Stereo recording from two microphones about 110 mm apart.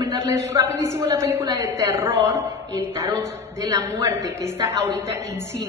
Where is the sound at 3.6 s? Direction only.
30° right (ahead or behind).